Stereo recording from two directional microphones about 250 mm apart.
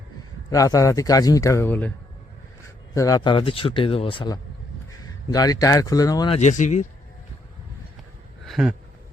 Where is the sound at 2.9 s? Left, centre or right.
Centre; by 6.8 s left.